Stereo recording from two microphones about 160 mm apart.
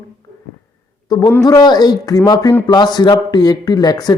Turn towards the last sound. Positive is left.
turn(degrees=25)  # may be behind; listen again after turning